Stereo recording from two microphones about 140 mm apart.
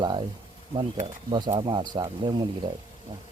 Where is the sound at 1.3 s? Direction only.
30° right (ahead or behind).